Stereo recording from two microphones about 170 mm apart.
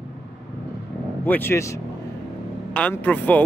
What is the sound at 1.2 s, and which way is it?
Speech, 10° left (ahead or behind).